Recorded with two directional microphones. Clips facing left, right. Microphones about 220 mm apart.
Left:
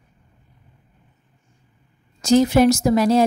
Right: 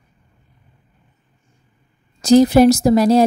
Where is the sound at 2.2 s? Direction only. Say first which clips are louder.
Right 4 dB; 35° right (ahead or behind).